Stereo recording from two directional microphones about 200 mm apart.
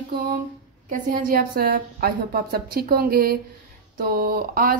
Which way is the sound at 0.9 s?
45° right (ahead or behind).